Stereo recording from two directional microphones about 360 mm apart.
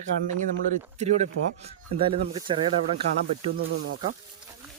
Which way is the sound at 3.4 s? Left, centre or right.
Right.